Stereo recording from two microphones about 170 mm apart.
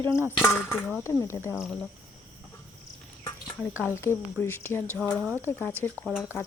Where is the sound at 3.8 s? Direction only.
15° left (ahead or behind).